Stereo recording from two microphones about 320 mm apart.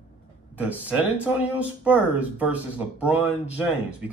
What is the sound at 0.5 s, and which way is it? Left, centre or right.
Speech, centre.